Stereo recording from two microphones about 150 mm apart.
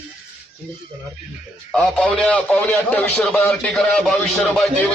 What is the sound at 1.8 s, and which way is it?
A man's voice, 5° left (ahead or behind).